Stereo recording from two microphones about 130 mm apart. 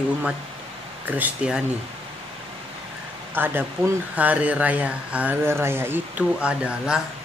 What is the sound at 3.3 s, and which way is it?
Speech, 15° right (ahead or behind).